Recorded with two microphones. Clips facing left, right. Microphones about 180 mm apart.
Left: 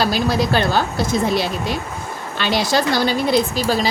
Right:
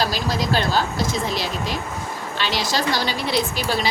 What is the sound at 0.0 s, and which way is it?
A woman's voice, 55° left (ahead or behind).